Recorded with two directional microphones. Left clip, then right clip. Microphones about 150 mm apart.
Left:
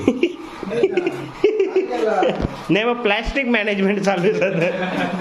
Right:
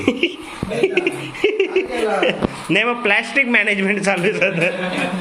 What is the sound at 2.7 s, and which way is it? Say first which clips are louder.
A man's voice: right 2 dB; 20° left (ahead or behind).